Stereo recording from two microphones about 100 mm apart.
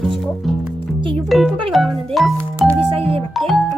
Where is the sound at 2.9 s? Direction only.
70° right (ahead or behind).